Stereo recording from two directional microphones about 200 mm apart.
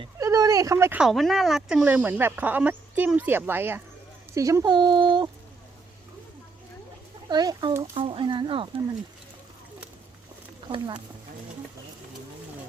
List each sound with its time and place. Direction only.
0.0 s speech: 15° right (ahead or behind)
7.3 s speech: 20° right (ahead or behind)
10.7 s speech: 25° right (ahead or behind)